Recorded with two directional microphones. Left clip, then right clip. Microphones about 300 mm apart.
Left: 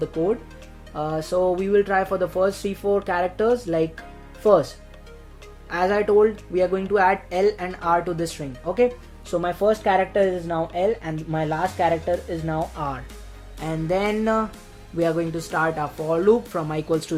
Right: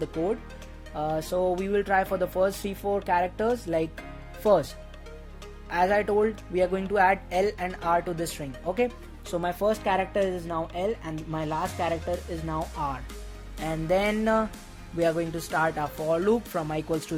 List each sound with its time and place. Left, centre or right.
0.9 s speech: right
5.6 s speech: right
13.7 s speech: right